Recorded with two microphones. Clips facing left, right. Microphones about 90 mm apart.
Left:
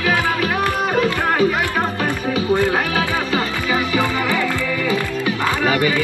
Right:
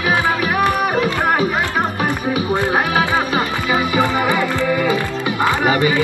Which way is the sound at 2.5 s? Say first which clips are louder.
Even; 20° right (ahead or behind).